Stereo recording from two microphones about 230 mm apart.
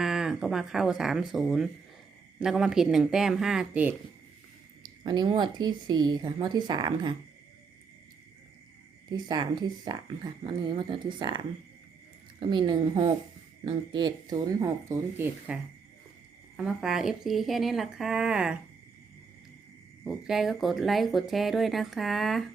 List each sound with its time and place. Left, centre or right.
0.0 s speech: centre
4.8 s speech: centre
9.0 s speech: centre
16.6 s speech: centre
20.1 s speech: centre